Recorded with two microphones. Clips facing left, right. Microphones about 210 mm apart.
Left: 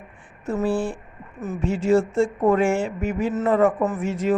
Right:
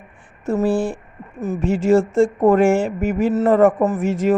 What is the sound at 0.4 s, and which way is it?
A man's voice, 45° right (ahead or behind).